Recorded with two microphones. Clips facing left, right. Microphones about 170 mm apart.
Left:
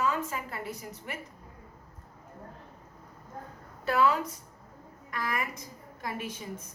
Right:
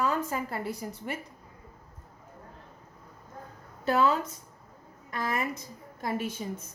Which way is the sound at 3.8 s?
25° right (ahead or behind).